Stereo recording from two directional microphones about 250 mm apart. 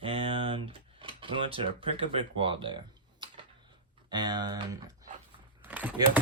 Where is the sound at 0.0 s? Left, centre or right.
Right.